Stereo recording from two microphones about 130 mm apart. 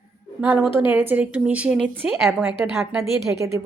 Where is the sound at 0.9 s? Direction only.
10° right (ahead or behind).